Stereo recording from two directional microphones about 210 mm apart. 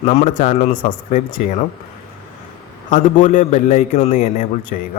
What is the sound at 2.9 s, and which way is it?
A man's voice, 35° left (ahead or behind).